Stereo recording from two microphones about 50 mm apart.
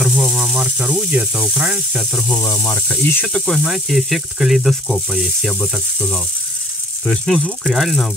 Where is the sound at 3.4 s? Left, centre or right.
Centre.